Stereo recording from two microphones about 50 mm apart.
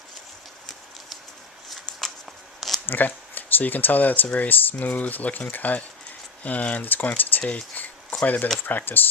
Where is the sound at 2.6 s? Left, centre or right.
Centre.